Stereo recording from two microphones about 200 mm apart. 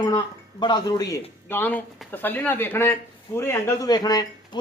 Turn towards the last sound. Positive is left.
turn(degrees=20)  # may be behind; listen again after turning